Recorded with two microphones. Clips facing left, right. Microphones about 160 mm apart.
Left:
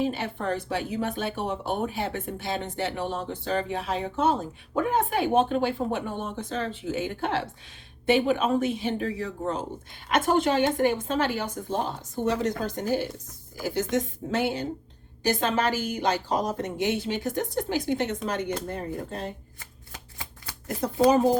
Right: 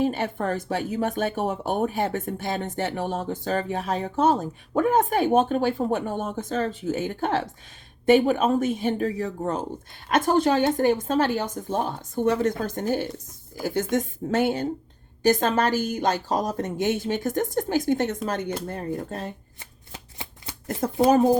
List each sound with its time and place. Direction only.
0.0 s speech: 50° right (ahead or behind)
19.5 s shuffling cards: 25° right (ahead or behind)